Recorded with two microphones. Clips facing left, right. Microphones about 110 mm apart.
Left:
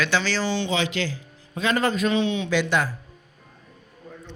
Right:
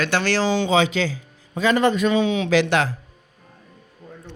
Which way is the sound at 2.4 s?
90° right.